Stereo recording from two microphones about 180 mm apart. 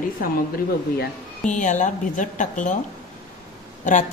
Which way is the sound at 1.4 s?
45° left (ahead or behind).